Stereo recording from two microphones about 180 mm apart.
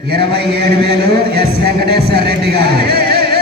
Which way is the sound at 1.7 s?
60° right (ahead or behind).